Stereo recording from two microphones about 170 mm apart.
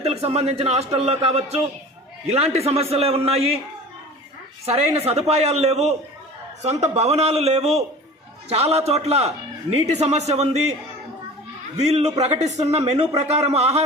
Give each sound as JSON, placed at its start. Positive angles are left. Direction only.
{"t": 0.0, "sound": "a man's voice", "side_deg": -35}
{"t": 4.6, "sound": "a man's voice", "side_deg": -35}
{"t": 11.8, "sound": "a man's voice", "side_deg": -40}